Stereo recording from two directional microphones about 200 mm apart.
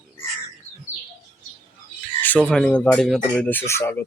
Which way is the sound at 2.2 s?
5° left (ahead or behind).